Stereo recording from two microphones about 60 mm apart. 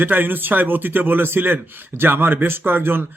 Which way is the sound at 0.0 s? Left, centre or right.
Right.